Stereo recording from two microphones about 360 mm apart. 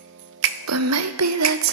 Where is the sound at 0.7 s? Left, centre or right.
Right.